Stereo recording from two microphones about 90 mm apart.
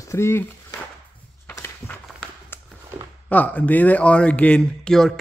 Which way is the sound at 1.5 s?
20° left (ahead or behind).